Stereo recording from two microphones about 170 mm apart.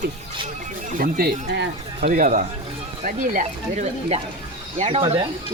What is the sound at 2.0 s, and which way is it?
Speech, 50° right (ahead or behind).